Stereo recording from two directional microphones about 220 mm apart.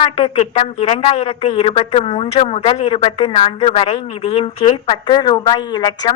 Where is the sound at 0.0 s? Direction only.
25° left (ahead or behind).